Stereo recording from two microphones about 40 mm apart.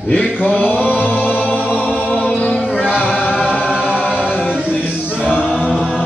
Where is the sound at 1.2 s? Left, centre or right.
Right.